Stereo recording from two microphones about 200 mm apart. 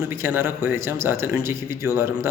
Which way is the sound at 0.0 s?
10° right (ahead or behind).